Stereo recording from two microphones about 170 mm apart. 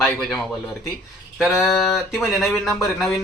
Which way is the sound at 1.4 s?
Centre (ahead or behind).